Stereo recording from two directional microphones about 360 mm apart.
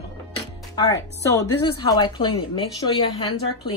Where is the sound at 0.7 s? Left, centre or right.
Centre.